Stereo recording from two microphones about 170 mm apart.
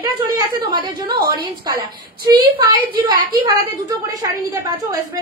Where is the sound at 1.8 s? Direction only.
25° right (ahead or behind).